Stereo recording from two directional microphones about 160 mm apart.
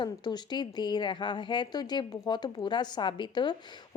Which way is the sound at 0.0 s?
25° left (ahead or behind).